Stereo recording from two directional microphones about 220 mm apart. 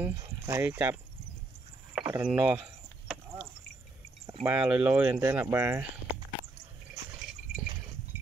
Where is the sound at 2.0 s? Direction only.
5° right (ahead or behind).